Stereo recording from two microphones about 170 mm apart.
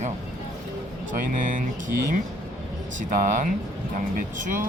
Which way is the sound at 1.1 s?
50° right (ahead or behind).